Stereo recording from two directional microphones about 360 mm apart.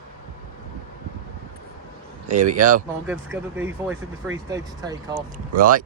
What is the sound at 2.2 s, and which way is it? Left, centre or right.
Speech, centre.